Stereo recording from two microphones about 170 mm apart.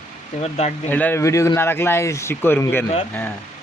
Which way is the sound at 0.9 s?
10° left (ahead or behind).